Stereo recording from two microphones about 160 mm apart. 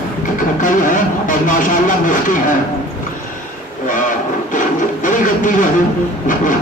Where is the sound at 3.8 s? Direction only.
55° left (ahead or behind).